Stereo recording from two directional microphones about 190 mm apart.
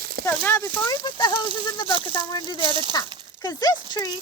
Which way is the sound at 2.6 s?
25° right (ahead or behind).